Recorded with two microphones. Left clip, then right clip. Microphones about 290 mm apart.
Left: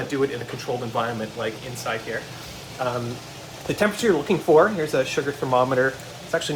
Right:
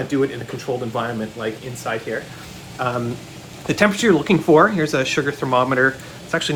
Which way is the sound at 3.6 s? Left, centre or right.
Right.